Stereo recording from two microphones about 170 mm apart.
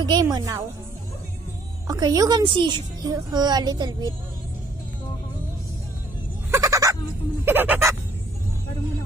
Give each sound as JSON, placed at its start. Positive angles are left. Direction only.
{"t": 0.0, "sound": "a child's voice", "side_deg": -25}
{"t": 1.9, "sound": "a child's voice", "side_deg": -25}
{"t": 6.5, "sound": "a sound", "side_deg": -20}
{"t": 7.4, "sound": "fowl", "side_deg": -10}